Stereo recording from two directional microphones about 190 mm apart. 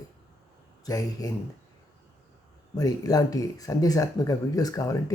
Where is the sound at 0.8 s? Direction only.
20° left (ahead or behind).